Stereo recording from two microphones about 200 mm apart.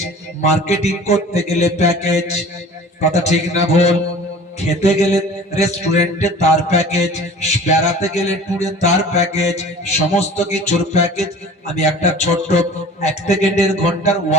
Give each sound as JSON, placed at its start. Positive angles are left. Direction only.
{"t": 0.4, "sound": "mantra", "side_deg": 35}